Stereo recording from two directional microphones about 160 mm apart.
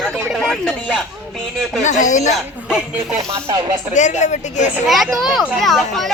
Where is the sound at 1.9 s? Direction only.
50° left (ahead or behind).